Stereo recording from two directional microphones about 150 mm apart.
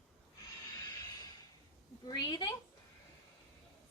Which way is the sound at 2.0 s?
25° left (ahead or behind).